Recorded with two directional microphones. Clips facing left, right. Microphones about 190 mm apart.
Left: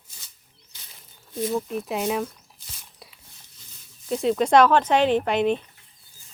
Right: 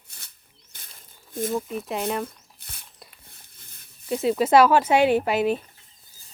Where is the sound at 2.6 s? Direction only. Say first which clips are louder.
Even; 60° right (ahead or behind).